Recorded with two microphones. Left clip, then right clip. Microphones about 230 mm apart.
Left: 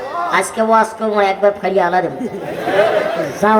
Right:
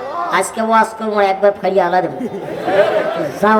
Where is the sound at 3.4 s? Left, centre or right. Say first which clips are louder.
Even; right.